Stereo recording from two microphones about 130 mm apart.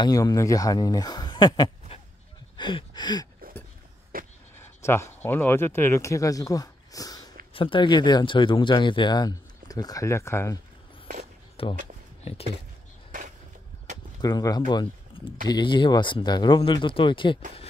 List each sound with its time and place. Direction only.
0.0 s speech: 30° left (ahead or behind)
1.9 s goat: 50° left (ahead or behind)
2.5 s a sound: 35° left (ahead or behind)
4.1 s vehicle: 90° right
4.6 s speech: 20° left (ahead or behind)
7.5 s speech: 40° left (ahead or behind); by 10.6 s 20° left (ahead or behind)
11.6 s speech: 45° left (ahead or behind)
14.2 s speech: 30° left (ahead or behind)
14.7 s a sound: 35° left (ahead or behind)
15.4 s speech: 35° left (ahead or behind)